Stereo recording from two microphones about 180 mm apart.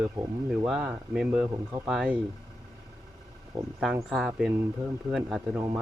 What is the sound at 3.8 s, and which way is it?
Speech, centre (ahead or behind).